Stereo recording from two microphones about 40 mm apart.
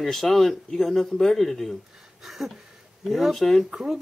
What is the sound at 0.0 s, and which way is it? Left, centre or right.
Speech, centre.